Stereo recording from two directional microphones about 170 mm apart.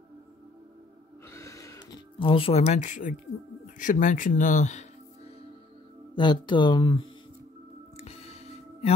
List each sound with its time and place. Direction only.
1.3 s a sound: 15° left (ahead or behind); by 3.2 s 50° left (ahead or behind)
3.6 s speech: 50° left (ahead or behind)
6.1 s speech: 25° left (ahead or behind)
8.0 s music: 35° left (ahead or behind)